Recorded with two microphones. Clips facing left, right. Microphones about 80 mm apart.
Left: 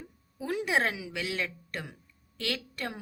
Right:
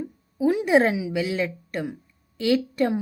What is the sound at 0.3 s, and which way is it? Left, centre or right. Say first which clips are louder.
A woman's voice: right 10 dB; centre.